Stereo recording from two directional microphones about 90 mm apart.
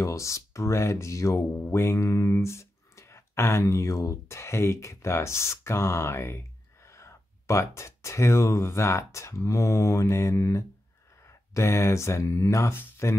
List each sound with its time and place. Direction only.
0.0 s speech: 35° left (ahead or behind)